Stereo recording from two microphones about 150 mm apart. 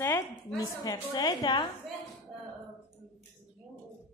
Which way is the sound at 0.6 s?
25° left (ahead or behind).